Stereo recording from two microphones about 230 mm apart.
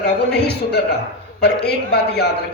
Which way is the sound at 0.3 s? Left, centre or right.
Left.